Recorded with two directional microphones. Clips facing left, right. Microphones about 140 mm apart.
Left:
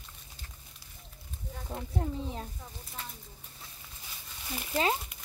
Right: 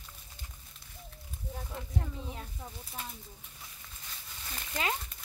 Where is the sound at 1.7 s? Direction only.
30° left (ahead or behind).